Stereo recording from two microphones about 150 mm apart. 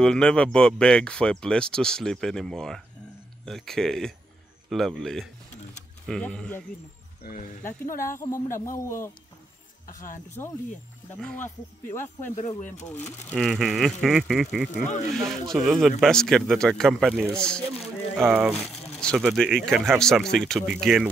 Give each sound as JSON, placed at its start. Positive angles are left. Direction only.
{"t": 0.0, "sound": "speech", "side_deg": 5}
{"t": 8.2, "sound": "a man's voice", "side_deg": 20}
{"t": 9.8, "sound": "speech", "side_deg": 60}
{"t": 11.1, "sound": "speech", "side_deg": 5}
{"t": 12.0, "sound": "speech", "side_deg": 50}
{"t": 13.4, "sound": "speech", "side_deg": 0}
{"t": 18.2, "sound": "speech", "side_deg": -10}
{"t": 18.9, "sound": "speech", "side_deg": 5}